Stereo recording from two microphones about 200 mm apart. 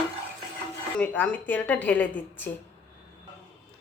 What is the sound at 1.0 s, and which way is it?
Speech, 5° left (ahead or behind).